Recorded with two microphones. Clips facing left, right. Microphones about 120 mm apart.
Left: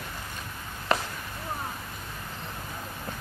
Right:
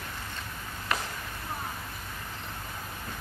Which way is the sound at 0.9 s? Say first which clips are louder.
Left 5 dB; 30° left (ahead or behind).